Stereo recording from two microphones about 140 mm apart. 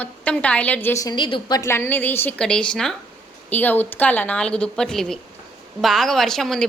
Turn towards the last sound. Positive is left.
turn(degrees=5)  # may be behind; listen again after turning